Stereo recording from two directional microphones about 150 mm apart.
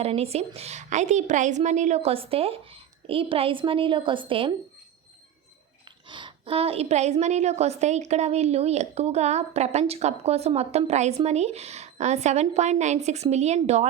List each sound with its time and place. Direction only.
0.0 s a woman's voice: 40° right (ahead or behind)
6.1 s a woman's voice: 30° right (ahead or behind); by 13.8 s 50° right (ahead or behind)